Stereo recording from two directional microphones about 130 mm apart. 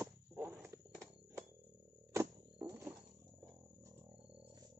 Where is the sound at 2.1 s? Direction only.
20° right (ahead or behind).